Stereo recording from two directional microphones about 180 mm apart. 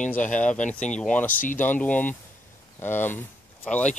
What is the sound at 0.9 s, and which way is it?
Speech, 5° left (ahead or behind).